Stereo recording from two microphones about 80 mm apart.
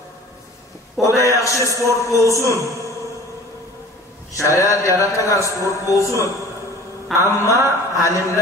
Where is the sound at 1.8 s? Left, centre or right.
Right.